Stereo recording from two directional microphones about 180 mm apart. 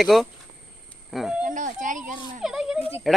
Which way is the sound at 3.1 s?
Centre (ahead or behind).